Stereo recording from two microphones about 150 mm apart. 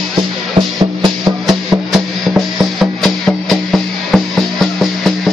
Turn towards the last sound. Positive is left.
turn(degrees=0)  # may be behind; listen again after turning